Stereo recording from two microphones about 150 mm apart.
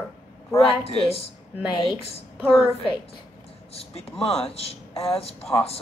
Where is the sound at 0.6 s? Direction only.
40° left (ahead or behind).